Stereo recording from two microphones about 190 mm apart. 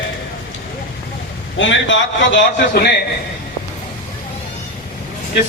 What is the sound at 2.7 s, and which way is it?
Speech, 55° left (ahead or behind).